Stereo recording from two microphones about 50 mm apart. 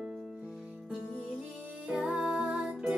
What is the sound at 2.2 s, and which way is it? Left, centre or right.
Music, centre.